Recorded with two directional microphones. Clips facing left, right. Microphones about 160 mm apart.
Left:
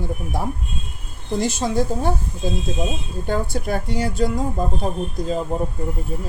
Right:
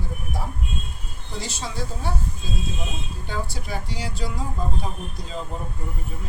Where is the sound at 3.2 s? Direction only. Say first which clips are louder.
Left 10 dB; 50° left (ahead or behind).